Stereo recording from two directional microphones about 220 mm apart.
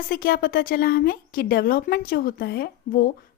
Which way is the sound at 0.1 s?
40° left (ahead or behind).